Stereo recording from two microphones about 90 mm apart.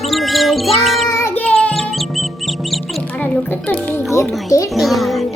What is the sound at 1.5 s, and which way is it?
Music, 5° left (ahead or behind).